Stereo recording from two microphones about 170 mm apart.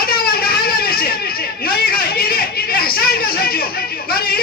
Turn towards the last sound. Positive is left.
turn(degrees=65)  # may be behind; listen again after turning